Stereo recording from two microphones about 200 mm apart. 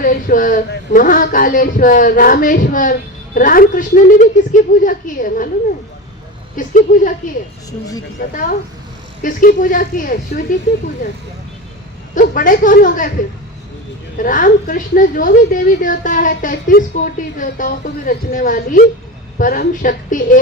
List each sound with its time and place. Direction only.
0.0 s a woman's voice: 45° left (ahead or behind)
6.6 s a woman's voice: 40° left (ahead or behind)
8.2 s speech: 45° left (ahead or behind)
12.1 s speech: 40° left (ahead or behind)
14.2 s speech: 45° left (ahead or behind)